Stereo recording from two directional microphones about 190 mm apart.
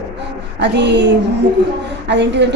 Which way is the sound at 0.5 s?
65° right (ahead or behind).